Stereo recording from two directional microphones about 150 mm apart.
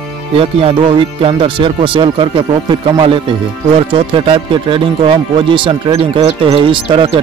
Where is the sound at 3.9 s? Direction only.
35° right (ahead or behind).